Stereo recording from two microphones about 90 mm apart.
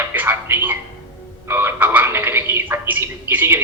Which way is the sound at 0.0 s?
20° right (ahead or behind).